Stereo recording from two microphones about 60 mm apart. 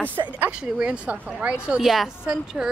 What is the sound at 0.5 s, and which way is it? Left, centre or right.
Speech, centre.